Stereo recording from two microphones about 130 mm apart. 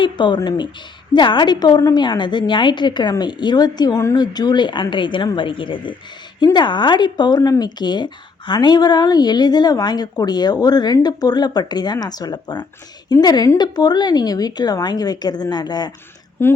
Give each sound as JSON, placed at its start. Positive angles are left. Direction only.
{"t": 0.0, "sound": "speech", "side_deg": 35}
{"t": 16.4, "sound": "a woman's voice", "side_deg": 15}